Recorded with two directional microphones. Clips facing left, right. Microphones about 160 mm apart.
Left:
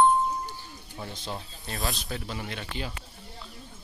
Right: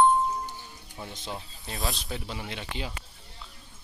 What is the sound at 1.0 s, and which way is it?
Speech, 15° right (ahead or behind).